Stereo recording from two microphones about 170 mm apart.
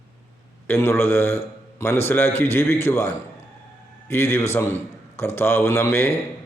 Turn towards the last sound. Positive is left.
turn(degrees=15)  # may be behind; listen again after turning